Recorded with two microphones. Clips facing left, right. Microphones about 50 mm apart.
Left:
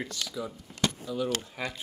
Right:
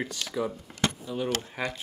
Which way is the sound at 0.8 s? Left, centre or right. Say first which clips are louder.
Right 1 dB; right.